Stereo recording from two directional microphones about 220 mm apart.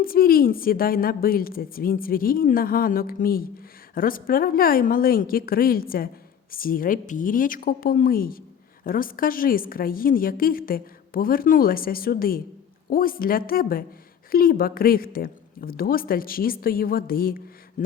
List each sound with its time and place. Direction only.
0.0 s a woman's voice: 40° left (ahead or behind)